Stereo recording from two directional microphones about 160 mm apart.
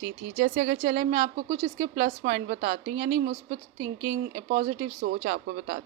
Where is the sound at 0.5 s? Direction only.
45° right (ahead or behind).